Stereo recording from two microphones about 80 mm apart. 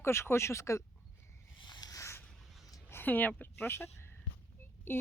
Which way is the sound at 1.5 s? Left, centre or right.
Left.